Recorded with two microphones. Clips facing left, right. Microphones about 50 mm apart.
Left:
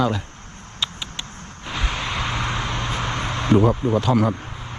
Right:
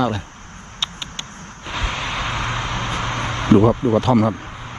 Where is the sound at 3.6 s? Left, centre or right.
Right.